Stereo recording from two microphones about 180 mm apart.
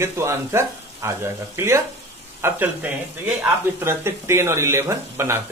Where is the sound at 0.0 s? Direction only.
15° right (ahead or behind).